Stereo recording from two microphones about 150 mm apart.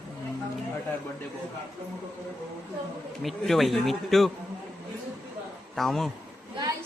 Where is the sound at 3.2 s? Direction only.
Centre (ahead or behind).